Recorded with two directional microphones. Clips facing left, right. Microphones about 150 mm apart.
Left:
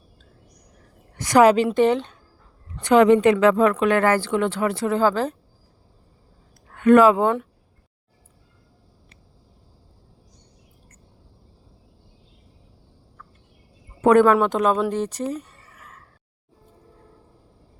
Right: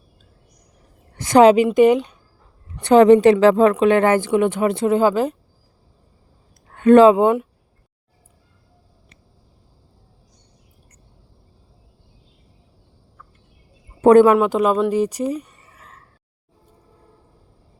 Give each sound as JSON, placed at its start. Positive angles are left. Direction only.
{"t": 1.1, "sound": "a woman's voice", "side_deg": -25}
{"t": 1.7, "sound": "speech", "side_deg": -10}
{"t": 2.8, "sound": "a woman's voice", "side_deg": -35}
{"t": 6.7, "sound": "speech", "side_deg": -30}
{"t": 14.0, "sound": "speech", "side_deg": -30}
{"t": 14.3, "sound": "speech", "side_deg": -5}
{"t": 15.7, "sound": "a sound", "side_deg": -30}